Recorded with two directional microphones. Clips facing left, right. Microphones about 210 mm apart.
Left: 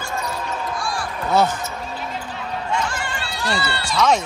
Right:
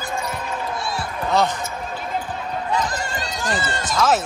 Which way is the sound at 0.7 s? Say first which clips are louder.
Even; 25° right (ahead or behind).